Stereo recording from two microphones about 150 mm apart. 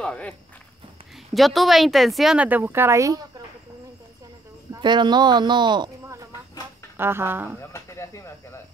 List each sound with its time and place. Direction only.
0.0 s speech: 5° left (ahead or behind); by 3.3 s 20° right (ahead or behind)
4.7 s speech: 30° right (ahead or behind)
7.0 s speech: 15° right (ahead or behind)
7.7 s speech: 20° left (ahead or behind)